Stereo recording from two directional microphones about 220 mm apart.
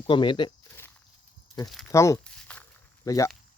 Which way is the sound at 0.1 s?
20° left (ahead or behind).